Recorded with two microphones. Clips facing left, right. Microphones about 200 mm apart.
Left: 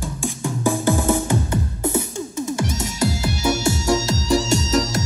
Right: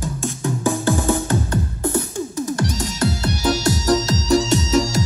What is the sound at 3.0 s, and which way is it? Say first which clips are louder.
Music: even; centre (ahead or behind).